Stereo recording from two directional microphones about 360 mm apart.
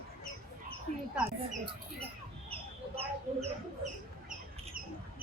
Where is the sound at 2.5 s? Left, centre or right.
Centre.